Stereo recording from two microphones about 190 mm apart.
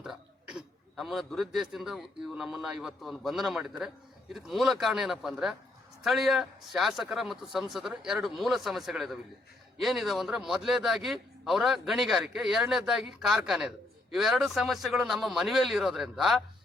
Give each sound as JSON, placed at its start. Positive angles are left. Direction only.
{"t": 0.0, "sound": "a man's voice", "side_deg": -5}